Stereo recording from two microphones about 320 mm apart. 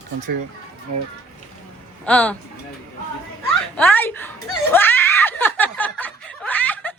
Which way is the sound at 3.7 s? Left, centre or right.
Centre.